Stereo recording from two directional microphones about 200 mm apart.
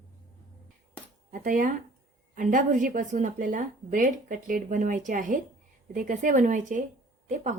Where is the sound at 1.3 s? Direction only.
40° right (ahead or behind).